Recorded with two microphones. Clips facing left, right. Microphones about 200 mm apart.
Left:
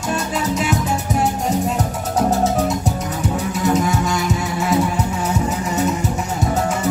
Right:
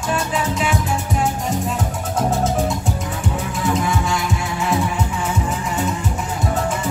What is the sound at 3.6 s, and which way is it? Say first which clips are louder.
Music: left 2 dB; 40° left (ahead or behind).